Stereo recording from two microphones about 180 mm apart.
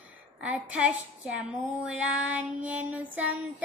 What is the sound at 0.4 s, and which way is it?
Child singing, 5° right (ahead or behind).